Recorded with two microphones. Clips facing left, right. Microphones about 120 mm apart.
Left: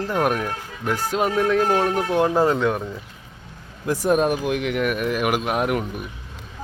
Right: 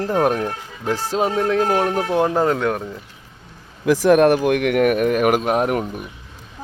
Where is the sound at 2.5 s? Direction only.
Centre (ahead or behind).